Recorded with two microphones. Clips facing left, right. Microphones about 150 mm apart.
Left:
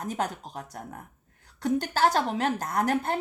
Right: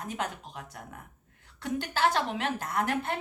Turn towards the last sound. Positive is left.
turn(degrees=40)  # may be behind; listen again after turning